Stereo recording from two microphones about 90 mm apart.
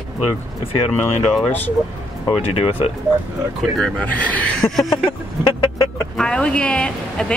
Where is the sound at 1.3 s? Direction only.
5° left (ahead or behind).